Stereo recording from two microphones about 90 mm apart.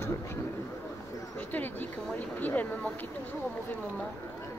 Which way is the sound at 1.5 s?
20° left (ahead or behind).